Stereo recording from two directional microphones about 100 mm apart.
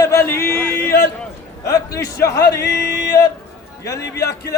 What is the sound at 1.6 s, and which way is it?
Speech, 35° left (ahead or behind).